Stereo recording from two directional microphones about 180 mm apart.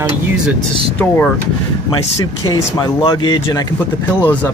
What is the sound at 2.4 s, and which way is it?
Speech, 20° left (ahead or behind).